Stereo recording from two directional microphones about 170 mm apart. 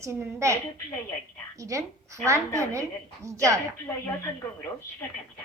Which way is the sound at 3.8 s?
10° left (ahead or behind).